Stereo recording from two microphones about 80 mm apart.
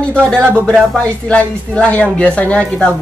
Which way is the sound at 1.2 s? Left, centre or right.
Centre.